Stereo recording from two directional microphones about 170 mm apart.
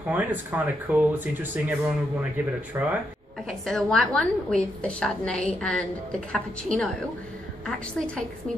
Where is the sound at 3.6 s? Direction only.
5° left (ahead or behind).